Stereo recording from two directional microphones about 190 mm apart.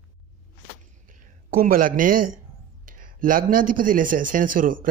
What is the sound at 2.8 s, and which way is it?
A man's voice, 45° right (ahead or behind).